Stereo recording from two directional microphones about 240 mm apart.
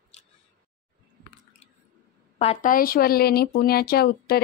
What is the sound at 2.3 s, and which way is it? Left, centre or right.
Speech, left.